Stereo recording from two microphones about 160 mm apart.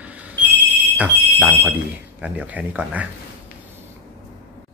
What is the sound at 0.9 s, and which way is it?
Speech, 5° right (ahead or behind).